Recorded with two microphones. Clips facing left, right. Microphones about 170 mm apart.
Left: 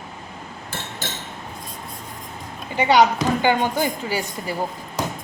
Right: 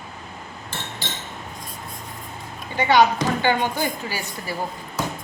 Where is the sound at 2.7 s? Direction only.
15° left (ahead or behind).